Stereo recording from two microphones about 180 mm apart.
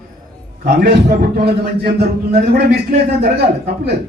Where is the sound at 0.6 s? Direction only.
65° right (ahead or behind).